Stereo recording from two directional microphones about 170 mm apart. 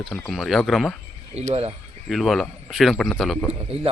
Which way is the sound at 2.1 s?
Centre (ahead or behind).